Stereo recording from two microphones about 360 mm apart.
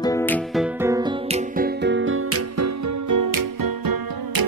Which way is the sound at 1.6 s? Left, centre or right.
Right.